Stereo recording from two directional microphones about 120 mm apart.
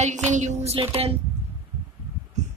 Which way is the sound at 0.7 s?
55° right (ahead or behind).